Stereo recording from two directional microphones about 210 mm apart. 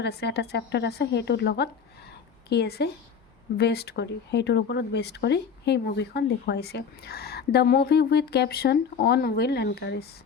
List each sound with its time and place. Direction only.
0.0 s speech: 50° left (ahead or behind)